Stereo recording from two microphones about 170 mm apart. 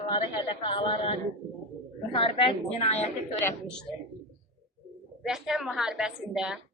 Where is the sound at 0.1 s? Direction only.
25° left (ahead or behind).